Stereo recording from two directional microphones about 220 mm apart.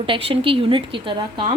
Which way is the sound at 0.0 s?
25° right (ahead or behind).